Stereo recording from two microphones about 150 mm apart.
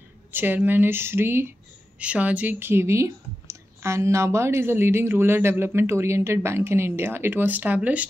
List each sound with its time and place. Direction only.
0.3 s speech: 15° right (ahead or behind)